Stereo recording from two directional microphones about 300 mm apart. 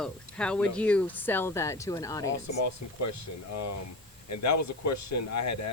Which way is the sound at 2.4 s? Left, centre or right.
Left.